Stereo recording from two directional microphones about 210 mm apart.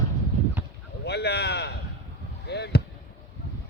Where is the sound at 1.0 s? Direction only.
50° left (ahead or behind).